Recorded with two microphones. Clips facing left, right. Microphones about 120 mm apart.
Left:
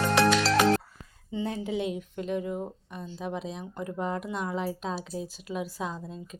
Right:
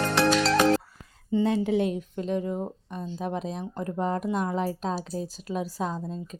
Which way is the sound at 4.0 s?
40° right (ahead or behind).